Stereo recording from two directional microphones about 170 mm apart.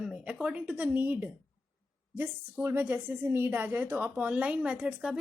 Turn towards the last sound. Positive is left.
turn(degrees=-5)  # may be behind; listen again after turning